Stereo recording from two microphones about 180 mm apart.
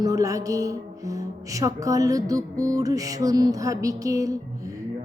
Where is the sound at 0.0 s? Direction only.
20° right (ahead or behind).